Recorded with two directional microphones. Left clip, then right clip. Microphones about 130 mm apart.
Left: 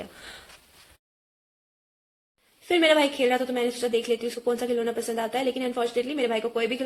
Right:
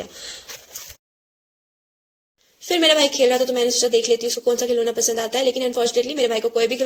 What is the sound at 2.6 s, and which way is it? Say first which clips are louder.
Speech: right 4 dB; 30° right (ahead or behind).